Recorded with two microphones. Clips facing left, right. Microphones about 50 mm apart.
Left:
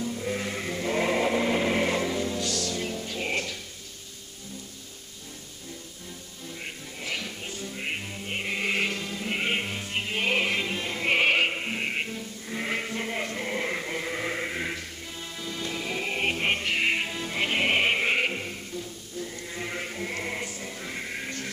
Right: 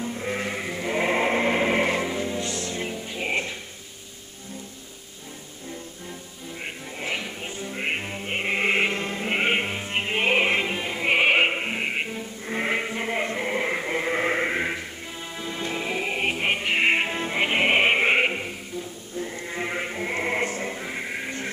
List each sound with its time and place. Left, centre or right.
0.0 s sheep: right
6.6 s music: right
12.4 s sheep: right
15.3 s music: right
16.7 s music: right
19.1 s sheep: right
20.7 s music: centre